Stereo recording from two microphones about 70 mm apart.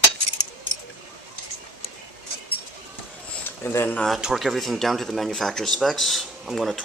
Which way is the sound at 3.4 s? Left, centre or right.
Left.